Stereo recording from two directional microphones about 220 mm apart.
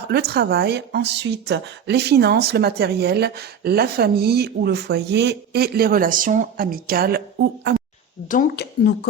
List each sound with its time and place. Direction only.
0.1 s a woman's voice: 45° right (ahead or behind)
8.3 s speech: 40° left (ahead or behind)